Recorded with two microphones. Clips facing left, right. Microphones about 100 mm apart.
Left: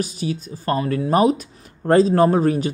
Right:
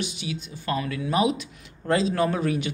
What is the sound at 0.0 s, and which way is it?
Speech, 40° left (ahead or behind).